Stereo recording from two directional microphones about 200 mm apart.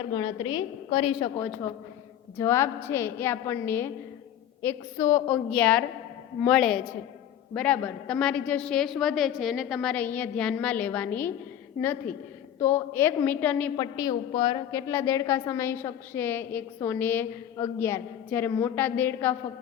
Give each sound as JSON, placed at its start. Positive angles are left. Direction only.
{"t": 0.1, "sound": "a woman's voice", "side_deg": 25}
{"t": 1.4, "sound": "a woman's voice", "side_deg": 15}
{"t": 12.5, "sound": "a woman's voice", "side_deg": 10}
{"t": 13.7, "sound": "a woman's voice", "side_deg": 20}
{"t": 14.7, "sound": "a woman's voice", "side_deg": 15}